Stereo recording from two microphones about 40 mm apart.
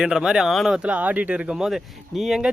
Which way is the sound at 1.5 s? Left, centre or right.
Centre.